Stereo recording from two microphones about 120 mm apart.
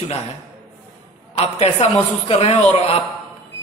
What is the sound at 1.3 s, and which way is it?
A man's voice, 60° left (ahead or behind).